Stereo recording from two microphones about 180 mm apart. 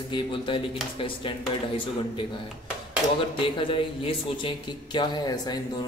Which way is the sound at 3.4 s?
30° left (ahead or behind).